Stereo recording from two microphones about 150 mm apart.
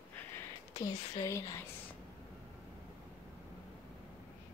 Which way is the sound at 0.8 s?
25° left (ahead or behind).